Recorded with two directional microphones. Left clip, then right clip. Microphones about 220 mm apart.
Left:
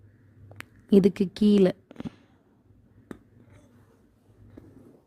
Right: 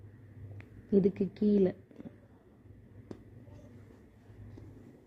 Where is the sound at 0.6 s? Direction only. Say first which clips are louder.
Left 7 dB; 50° left (ahead or behind).